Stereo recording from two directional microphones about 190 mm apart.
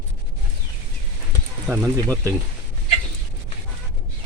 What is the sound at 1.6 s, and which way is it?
Speech, 15° right (ahead or behind).